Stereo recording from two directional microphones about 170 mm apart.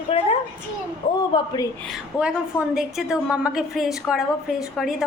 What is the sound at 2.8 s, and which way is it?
Speech, 5° right (ahead or behind).